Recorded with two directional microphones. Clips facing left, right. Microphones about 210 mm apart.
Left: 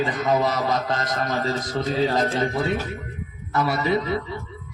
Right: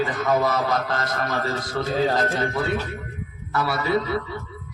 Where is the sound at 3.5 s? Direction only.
20° left (ahead or behind).